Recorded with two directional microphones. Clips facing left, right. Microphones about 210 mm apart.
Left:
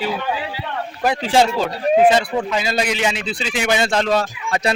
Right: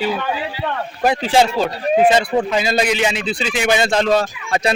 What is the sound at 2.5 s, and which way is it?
Speech, 20° right (ahead or behind).